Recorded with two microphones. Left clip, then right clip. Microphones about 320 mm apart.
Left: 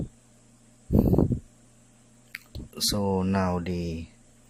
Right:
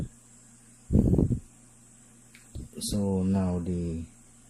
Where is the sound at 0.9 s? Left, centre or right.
Left.